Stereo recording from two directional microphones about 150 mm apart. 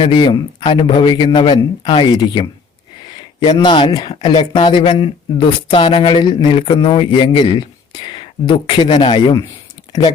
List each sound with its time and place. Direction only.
0.0 s speech: 30° left (ahead or behind)